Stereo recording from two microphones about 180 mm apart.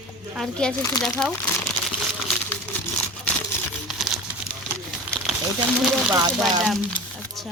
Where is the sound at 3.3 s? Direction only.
10° left (ahead or behind).